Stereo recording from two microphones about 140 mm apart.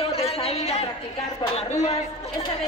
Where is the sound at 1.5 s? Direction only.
50° left (ahead or behind).